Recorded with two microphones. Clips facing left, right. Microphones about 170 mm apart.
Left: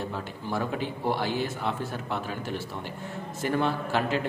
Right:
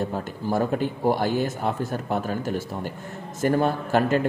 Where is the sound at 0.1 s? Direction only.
45° right (ahead or behind).